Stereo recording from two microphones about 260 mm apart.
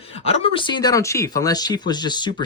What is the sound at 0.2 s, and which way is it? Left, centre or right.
Speech, left.